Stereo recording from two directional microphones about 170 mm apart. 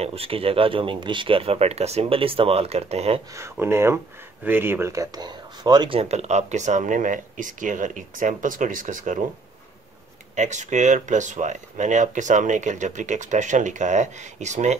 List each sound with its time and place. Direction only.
0.0 s speech: 35° right (ahead or behind)
3.3 s speech: 15° right (ahead or behind); by 9.2 s 50° right (ahead or behind)
10.3 s speech: 45° right (ahead or behind)